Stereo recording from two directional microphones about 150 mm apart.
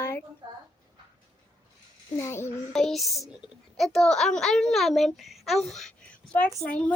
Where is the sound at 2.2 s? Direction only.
15° left (ahead or behind).